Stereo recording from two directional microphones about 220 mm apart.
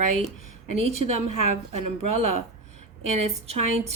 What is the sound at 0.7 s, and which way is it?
Speech, 30° right (ahead or behind).